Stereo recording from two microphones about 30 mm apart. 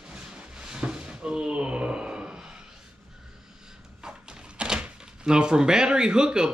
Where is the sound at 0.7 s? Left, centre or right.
Right.